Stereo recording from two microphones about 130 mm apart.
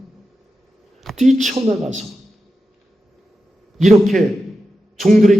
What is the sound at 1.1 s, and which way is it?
Speech, 65° right (ahead or behind).